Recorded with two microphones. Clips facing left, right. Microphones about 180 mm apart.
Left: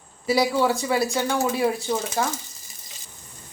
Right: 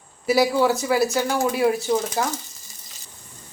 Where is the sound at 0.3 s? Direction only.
Centre (ahead or behind).